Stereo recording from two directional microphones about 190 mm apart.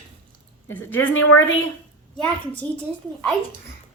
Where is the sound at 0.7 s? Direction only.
10° left (ahead or behind).